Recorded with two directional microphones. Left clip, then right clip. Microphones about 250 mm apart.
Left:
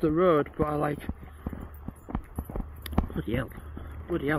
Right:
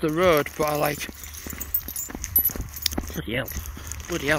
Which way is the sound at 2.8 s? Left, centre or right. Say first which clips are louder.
Right 5 dB; centre.